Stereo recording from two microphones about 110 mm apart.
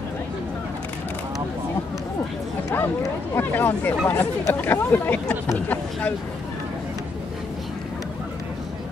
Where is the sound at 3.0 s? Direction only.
20° left (ahead or behind).